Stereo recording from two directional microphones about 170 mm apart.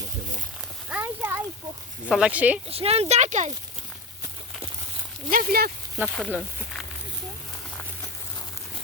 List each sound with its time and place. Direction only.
0.9 s a sound: 10° right (ahead or behind)
2.0 s speech: 5° right (ahead or behind)
2.6 s speech: 35° right (ahead or behind)
5.3 s speech: 55° right (ahead or behind)
6.1 s speech: centre (ahead or behind)